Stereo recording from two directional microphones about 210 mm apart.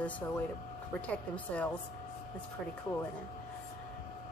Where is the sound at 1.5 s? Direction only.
5° left (ahead or behind).